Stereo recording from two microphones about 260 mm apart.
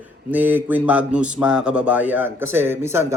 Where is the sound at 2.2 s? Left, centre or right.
Left.